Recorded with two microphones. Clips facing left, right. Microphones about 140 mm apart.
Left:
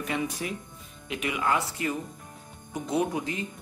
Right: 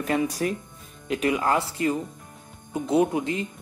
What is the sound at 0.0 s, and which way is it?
Speech, 40° right (ahead or behind).